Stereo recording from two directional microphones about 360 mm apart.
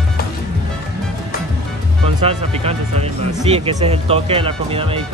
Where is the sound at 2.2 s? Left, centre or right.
Centre.